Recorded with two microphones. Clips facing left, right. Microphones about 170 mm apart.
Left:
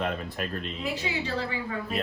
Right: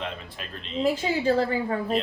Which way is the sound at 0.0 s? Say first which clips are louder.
Left 5 dB; 50° left (ahead or behind).